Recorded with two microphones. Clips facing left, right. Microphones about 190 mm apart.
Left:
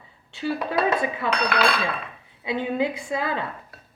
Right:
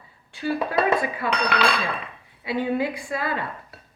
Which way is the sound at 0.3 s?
25° left (ahead or behind).